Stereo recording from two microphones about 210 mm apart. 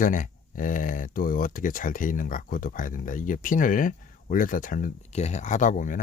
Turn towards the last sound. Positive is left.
turn(degrees=40)  # may be behind; listen again after turning